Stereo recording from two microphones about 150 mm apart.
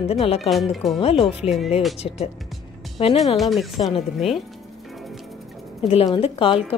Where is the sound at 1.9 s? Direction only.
45° left (ahead or behind).